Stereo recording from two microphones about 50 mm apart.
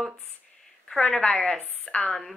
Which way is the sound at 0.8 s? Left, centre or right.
Centre.